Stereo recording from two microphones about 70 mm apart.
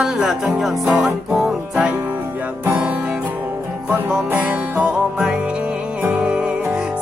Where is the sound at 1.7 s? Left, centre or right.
Centre.